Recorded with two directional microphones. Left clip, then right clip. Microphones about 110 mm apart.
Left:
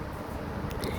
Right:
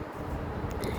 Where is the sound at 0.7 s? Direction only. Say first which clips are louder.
Even; 15° right (ahead or behind).